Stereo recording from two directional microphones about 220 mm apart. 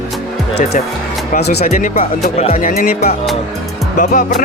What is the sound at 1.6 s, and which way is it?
Speech, 35° left (ahead or behind).